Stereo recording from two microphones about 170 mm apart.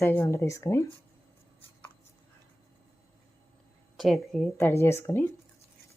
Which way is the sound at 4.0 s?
Centre (ahead or behind).